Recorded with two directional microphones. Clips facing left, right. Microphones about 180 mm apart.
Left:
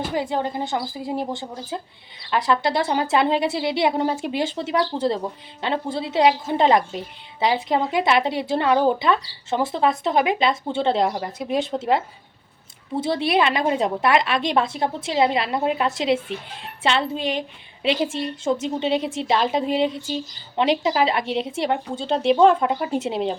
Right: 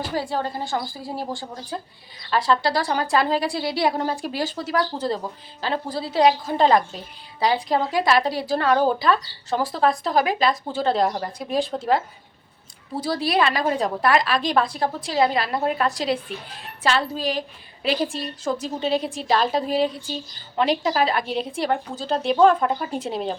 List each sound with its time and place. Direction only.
0.1 s a woman's voice: 20° left (ahead or behind)